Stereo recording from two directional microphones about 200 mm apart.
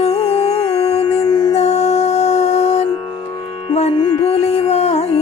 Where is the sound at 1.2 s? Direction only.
20° left (ahead or behind).